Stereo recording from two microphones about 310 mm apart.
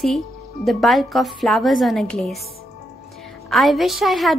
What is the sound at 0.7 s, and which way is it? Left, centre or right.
A woman's voice, centre.